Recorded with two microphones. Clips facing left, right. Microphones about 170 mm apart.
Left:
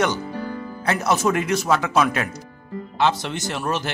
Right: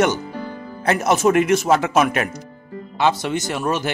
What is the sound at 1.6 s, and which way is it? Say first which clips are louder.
Speech: right 4 dB; 50° right (ahead or behind).